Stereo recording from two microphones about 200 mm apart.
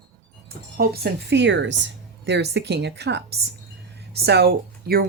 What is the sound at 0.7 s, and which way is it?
Speech, 50° right (ahead or behind).